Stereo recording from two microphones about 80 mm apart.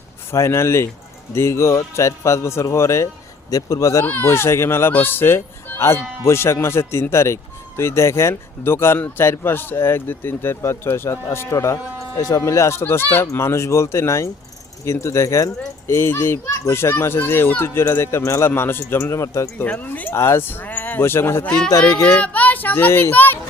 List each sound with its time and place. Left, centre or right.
0.3 s speech: left
4.0 s speech: left
12.8 s speech: left
19.6 s speech: left
20.1 s speech: left
22.0 s speech: centre